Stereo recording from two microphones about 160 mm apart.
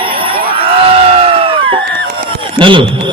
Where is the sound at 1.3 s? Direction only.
35° right (ahead or behind).